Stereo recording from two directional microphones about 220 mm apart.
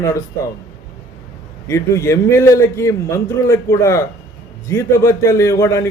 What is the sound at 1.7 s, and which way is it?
A man's voice, 15° left (ahead or behind).